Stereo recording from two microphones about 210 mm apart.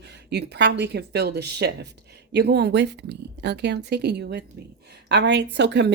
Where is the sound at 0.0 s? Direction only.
55° right (ahead or behind).